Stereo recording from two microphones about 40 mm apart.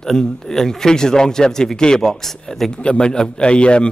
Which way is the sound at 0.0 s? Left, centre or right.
Centre.